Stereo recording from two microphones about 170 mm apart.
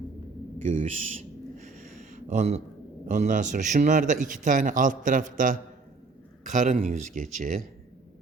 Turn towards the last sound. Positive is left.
turn(degrees=-50)  # may be behind; listen again after turning